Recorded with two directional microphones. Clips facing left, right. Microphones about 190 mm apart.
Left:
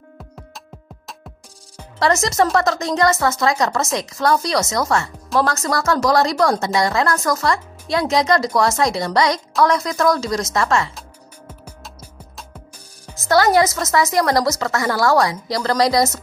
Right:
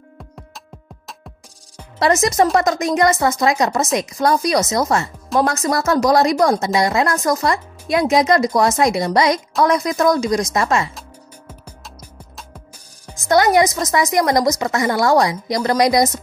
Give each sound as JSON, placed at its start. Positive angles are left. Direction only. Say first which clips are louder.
{"t": 2.0, "sound": "a woman's voice", "louder": "right 2 dB", "side_deg": -20}
{"t": 11.6, "sound": "music", "louder": "left 1 dB", "side_deg": 5}
{"t": 13.1, "sound": "a woman's voice", "louder": "right 1 dB", "side_deg": -15}